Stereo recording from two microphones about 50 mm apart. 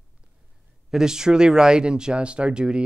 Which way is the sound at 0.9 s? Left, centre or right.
Centre.